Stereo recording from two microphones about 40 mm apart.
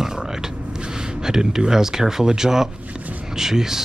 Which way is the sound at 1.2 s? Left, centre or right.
Centre.